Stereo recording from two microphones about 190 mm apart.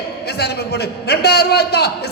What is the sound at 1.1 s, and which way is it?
Speech, 60° left (ahead or behind).